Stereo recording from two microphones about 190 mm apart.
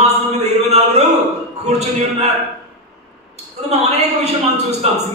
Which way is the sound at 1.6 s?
35° right (ahead or behind).